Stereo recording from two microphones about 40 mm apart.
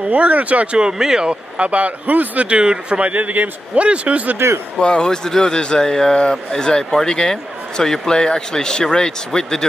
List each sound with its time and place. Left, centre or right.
0.1 s a man's voice: right
0.7 s speech: centre
1.3 s a man's voice: right
2.6 s speech: right
3.0 s a man's voice: right
4.7 s a man's voice: left